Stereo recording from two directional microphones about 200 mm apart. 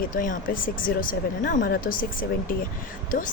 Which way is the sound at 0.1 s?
40° left (ahead or behind).